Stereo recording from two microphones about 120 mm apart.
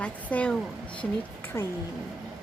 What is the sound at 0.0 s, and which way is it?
Speech, 10° left (ahead or behind).